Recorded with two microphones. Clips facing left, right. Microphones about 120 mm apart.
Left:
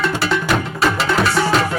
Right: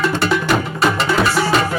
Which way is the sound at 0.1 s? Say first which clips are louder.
Right 2 dB; centre (ahead or behind).